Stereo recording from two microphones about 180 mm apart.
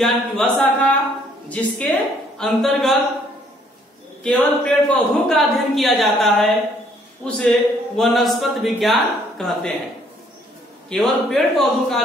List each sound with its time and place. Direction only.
0.0 s a woman's voice: centre (ahead or behind)
4.2 s a woman's voice: 5° left (ahead or behind)
10.9 s a woman's voice: centre (ahead or behind)